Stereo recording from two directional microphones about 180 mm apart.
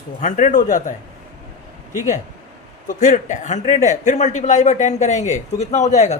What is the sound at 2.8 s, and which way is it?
A man's voice, 45° left (ahead or behind).